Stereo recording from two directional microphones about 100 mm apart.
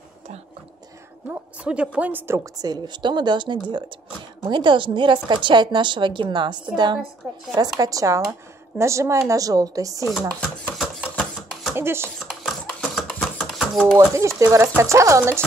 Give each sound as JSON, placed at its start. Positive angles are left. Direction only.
{"t": 1.3, "sound": "a woman's voice", "side_deg": -10}
{"t": 2.6, "sound": "a woman's voice", "side_deg": -45}
{"t": 7.5, "sound": "a woman's voice", "side_deg": -35}
{"t": 11.7, "sound": "speech", "side_deg": -25}
{"t": 12.3, "sound": "a sound", "side_deg": 0}
{"t": 13.9, "sound": "speech", "side_deg": -30}